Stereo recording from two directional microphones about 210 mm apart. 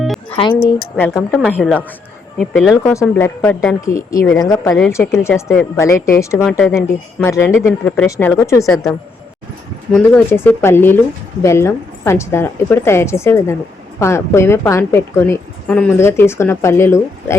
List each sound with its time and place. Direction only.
0.0 s music: centre (ahead or behind)
0.9 s a woman's voice: 10° left (ahead or behind)
6.4 s a woman's voice: centre (ahead or behind)
9.9 s a woman's voice: 10° left (ahead or behind)